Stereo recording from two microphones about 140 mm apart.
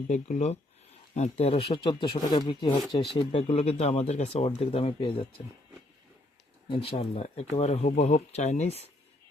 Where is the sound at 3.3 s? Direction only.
50° left (ahead or behind).